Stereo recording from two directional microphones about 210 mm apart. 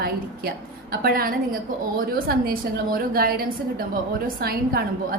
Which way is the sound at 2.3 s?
45° right (ahead or behind).